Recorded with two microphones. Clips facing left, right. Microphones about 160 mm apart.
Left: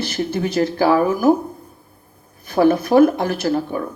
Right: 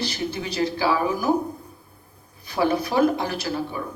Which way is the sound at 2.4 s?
55° left (ahead or behind).